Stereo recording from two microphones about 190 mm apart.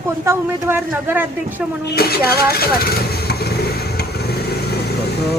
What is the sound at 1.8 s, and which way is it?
Vehicle, 60° left (ahead or behind).